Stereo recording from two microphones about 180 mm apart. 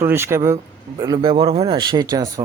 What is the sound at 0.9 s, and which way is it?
Speech, 25° right (ahead or behind).